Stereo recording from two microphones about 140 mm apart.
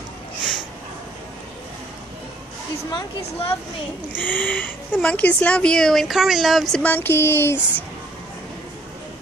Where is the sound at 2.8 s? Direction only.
30° left (ahead or behind).